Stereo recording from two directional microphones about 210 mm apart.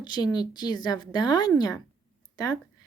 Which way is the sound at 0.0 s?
20° left (ahead or behind).